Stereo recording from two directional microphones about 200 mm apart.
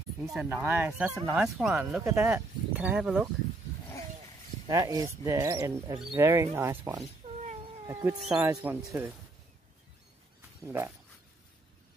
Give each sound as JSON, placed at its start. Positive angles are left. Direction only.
{"t": 0.2, "sound": "speech", "side_deg": -5}
{"t": 4.6, "sound": "speech", "side_deg": -15}
{"t": 7.6, "sound": "cat", "side_deg": -15}
{"t": 8.2, "sound": "speech", "side_deg": -5}
{"t": 8.5, "sound": "speech", "side_deg": -15}
{"t": 10.6, "sound": "speech", "side_deg": -10}